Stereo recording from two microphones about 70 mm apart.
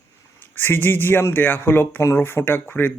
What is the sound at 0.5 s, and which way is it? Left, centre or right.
Speech, left.